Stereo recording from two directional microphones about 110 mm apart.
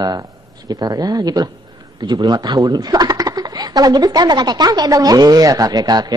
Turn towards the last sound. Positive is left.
turn(degrees=-35)  # may be behind; listen again after turning